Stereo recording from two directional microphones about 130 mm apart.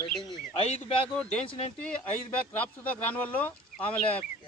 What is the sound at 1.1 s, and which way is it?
Speech, 5° left (ahead or behind).